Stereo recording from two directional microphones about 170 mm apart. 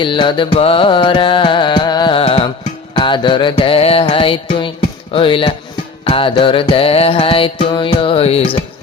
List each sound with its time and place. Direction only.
0.0 s music: 30° left (ahead or behind)